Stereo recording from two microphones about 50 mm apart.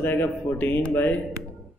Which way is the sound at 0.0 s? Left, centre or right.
Left.